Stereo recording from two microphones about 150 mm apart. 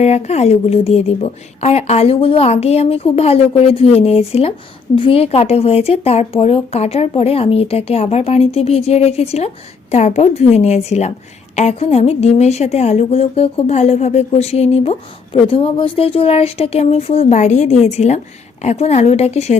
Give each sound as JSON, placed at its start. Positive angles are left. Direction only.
{"t": 0.0, "sound": "a woman's voice", "side_deg": 45}